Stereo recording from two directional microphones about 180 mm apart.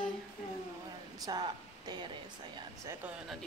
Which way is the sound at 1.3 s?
25° right (ahead or behind).